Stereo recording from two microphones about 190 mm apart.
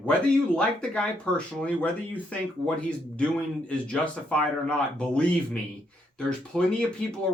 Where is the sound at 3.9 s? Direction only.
5° left (ahead or behind).